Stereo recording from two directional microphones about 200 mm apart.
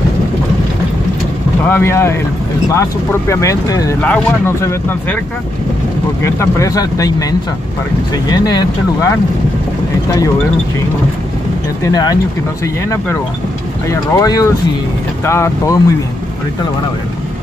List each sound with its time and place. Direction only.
1.6 s speech: 10° left (ahead or behind)
6.2 s speech: 15° left (ahead or behind)
11.8 s speech: 20° left (ahead or behind)
13.8 s speech: 20° left (ahead or behind)